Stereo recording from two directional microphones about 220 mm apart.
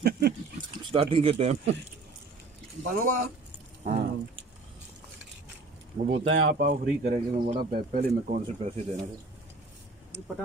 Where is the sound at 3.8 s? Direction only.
30° right (ahead or behind).